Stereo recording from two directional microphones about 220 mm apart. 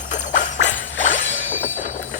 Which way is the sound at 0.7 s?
60° left (ahead or behind).